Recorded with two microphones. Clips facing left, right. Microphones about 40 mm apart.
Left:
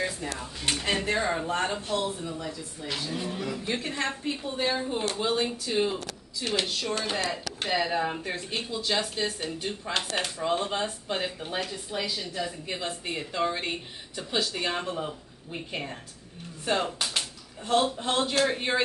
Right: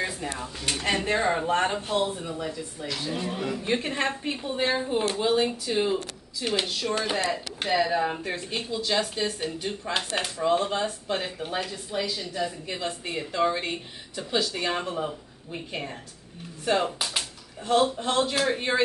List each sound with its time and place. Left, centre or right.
1.1 s speech: centre
1.4 s a woman's voice: right; by 18.8 s centre